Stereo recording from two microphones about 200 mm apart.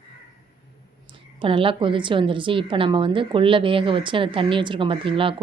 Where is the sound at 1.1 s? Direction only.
25° right (ahead or behind).